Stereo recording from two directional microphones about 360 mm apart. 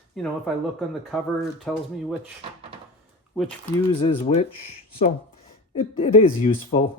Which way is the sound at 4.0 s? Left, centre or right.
Centre.